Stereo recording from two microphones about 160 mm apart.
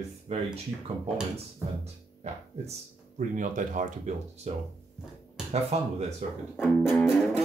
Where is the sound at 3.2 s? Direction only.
50° right (ahead or behind).